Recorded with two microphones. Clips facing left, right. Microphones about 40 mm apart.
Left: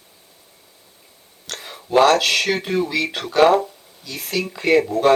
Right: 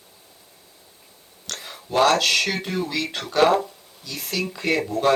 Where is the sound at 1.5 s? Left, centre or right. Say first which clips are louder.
Left 4 dB; centre.